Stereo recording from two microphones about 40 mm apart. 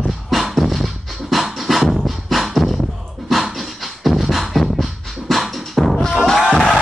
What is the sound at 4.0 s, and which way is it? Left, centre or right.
Music, centre.